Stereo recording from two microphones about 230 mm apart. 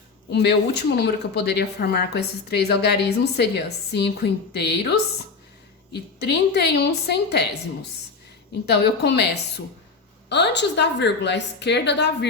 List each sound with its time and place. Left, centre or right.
0.3 s a woman's voice: left
8.6 s a woman's voice: left